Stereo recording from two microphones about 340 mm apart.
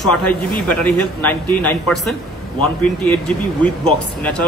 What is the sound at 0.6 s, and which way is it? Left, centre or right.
Speech, centre.